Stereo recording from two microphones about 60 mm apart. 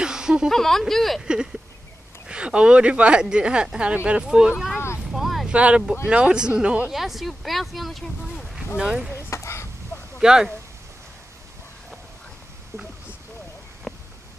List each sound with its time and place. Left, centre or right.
0.0 s a sound: centre
0.5 s speech: centre
1.2 s speech: centre
4.7 s vehicle: left
5.1 s vehicle: centre
5.5 s speech: centre
6.9 s speech: centre
8.7 s speech: centre
9.3 s a sound: left
10.1 s speech: centre
13.9 s a sound: centre